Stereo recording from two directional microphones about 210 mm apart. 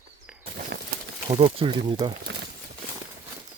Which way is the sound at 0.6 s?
50° right (ahead or behind).